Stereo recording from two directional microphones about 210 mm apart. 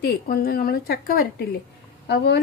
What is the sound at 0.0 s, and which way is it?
A woman's voice, 45° left (ahead or behind).